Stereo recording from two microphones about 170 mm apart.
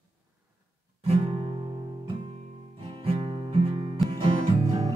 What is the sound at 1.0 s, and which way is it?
Music, 35° right (ahead or behind).